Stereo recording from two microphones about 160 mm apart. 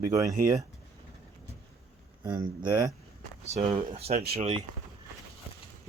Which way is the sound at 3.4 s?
40° right (ahead or behind).